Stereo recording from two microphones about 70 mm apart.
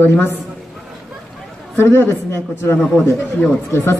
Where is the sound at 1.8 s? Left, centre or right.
Left.